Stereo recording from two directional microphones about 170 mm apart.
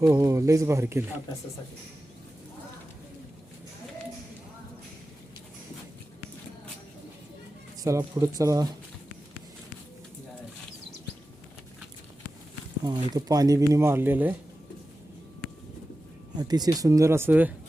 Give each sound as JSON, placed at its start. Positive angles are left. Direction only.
{"t": 0.0, "sound": "speech", "side_deg": -20}
{"t": 7.8, "sound": "speech", "side_deg": -20}
{"t": 12.8, "sound": "speech", "side_deg": -25}
{"t": 16.4, "sound": "speech", "side_deg": -25}